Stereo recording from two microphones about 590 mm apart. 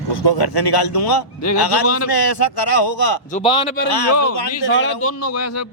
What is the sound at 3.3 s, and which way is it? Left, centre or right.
Speech, centre.